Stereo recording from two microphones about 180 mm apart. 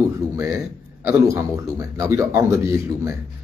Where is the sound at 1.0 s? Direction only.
15° right (ahead or behind).